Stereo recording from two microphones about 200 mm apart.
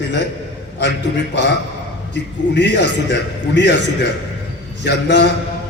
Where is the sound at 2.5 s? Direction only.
60° left (ahead or behind).